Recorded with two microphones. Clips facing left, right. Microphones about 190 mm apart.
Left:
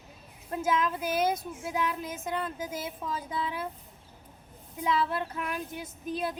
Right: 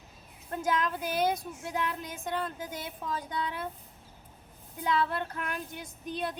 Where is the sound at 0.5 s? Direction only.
5° left (ahead or behind).